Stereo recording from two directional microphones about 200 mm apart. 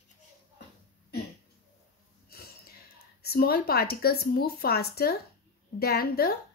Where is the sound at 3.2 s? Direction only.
50° left (ahead or behind).